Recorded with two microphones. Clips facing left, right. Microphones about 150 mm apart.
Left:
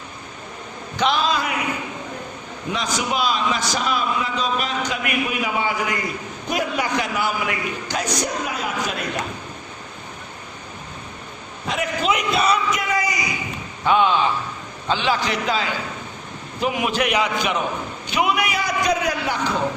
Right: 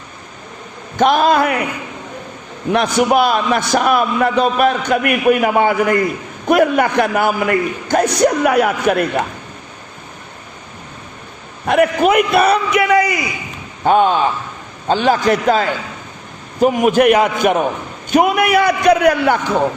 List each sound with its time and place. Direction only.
0.9 s a man's voice: 50° right (ahead or behind)
2.7 s a man's voice: 60° right (ahead or behind)
11.6 s a man's voice: 60° right (ahead or behind)
13.8 s a man's voice: 45° right (ahead or behind)